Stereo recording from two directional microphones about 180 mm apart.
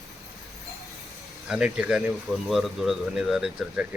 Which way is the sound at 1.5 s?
5° right (ahead or behind).